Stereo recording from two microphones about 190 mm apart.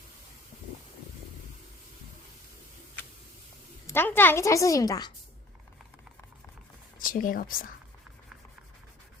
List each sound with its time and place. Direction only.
3.8 s a woman's voice: 10° left (ahead or behind)
7.0 s speech: 45° left (ahead or behind)